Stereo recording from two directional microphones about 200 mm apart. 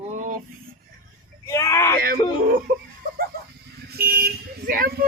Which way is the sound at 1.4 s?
15° left (ahead or behind).